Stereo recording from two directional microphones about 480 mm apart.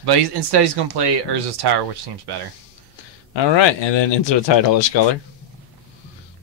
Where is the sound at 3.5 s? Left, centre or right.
Left.